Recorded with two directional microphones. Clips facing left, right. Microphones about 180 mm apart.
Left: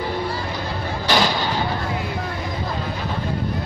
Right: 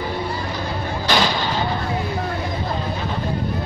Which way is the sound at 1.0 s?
10° left (ahead or behind).